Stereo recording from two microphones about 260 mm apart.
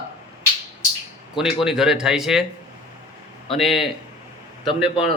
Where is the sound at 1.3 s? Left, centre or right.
Centre.